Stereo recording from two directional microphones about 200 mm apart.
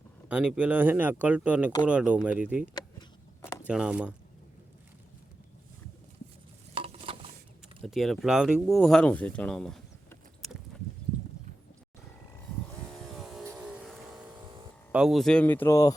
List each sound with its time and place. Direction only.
0.3 s speech: 5° right (ahead or behind)
3.4 s a sound: 15° left (ahead or behind)
3.7 s speech: 5° right (ahead or behind)
6.7 s stir: 30° right (ahead or behind)
7.8 s speech: centre (ahead or behind)
12.9 s vehicle: centre (ahead or behind)
13.4 s vehicle: 10° right (ahead or behind)
14.4 s a sound: 25° right (ahead or behind)
14.9 s speech: centre (ahead or behind); by 16.0 s 15° left (ahead or behind)